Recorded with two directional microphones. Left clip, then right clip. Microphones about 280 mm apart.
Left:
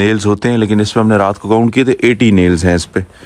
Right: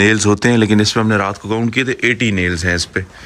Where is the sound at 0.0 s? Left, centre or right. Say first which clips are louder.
Even; centre.